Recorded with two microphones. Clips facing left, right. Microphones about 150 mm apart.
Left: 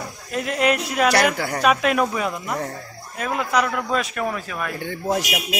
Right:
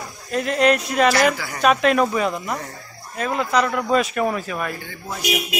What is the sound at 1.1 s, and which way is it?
Speech, 55° left (ahead or behind).